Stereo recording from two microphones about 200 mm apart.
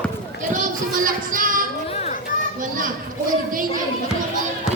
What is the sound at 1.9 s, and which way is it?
Children playing, 30° left (ahead or behind).